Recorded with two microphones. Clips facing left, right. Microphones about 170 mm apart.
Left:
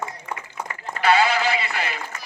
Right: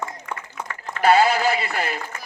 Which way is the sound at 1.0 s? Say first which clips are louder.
Right 3 dB; 45° right (ahead or behind).